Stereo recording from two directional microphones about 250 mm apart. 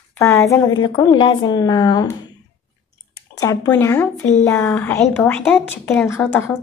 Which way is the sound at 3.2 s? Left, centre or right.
Centre.